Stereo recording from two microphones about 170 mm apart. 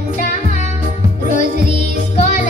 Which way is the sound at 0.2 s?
45° left (ahead or behind).